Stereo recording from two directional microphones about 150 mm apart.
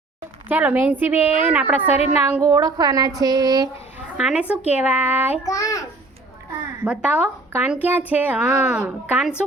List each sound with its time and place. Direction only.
0.4 s speech: 10° right (ahead or behind)
2.4 s a woman's voice: 20° right (ahead or behind)
4.2 s speech: 5° right (ahead or behind)
5.4 s a child's voice: 20° left (ahead or behind)
6.8 s speech: 5° right (ahead or behind)